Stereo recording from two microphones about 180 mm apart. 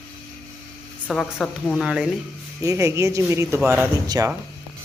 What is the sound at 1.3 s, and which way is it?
Speech, 10° left (ahead or behind).